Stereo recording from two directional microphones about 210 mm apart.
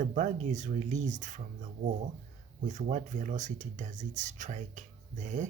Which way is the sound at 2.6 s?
35° right (ahead or behind).